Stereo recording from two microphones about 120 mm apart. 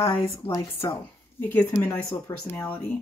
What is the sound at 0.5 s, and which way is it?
Speech, 25° left (ahead or behind).